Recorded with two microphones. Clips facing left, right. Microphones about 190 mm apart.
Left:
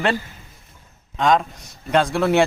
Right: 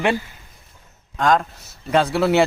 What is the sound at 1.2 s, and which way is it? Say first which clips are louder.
A man's voice: even; centre (ahead or behind).